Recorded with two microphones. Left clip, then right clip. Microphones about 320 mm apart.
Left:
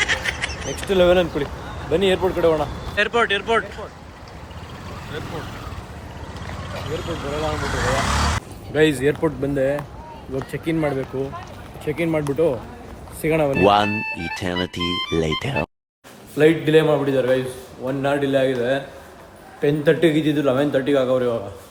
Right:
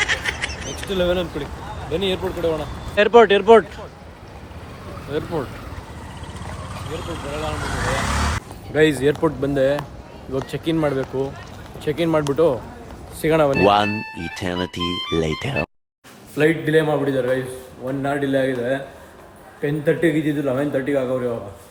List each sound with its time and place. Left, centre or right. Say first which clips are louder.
0.0 s duck: even; centre
0.9 s speech: left 5 dB; centre
2.9 s speech: right 7 dB; centre
5.1 s speech: right 7 dB; centre
7.4 s speech: left 2 dB; centre
11.9 s speech: right 2 dB; right
12.1 s speech: right 3 dB; centre
19.8 s speech: left 1 dB; centre